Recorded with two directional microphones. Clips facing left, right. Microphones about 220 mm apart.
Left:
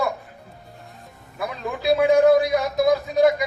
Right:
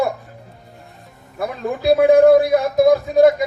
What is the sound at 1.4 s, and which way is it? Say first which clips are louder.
A man's voice: right 5 dB; 50° right (ahead or behind).